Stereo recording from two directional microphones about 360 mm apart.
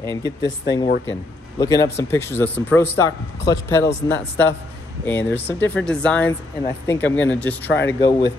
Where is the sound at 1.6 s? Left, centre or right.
Centre.